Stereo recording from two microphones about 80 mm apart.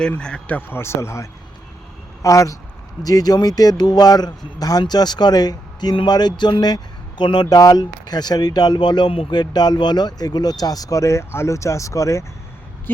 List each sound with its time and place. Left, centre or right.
0.2 s speech: centre
0.8 s speech: left
5.9 s speech: left